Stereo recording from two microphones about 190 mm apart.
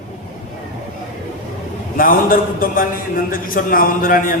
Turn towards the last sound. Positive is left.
turn(degrees=45)  # may be behind; listen again after turning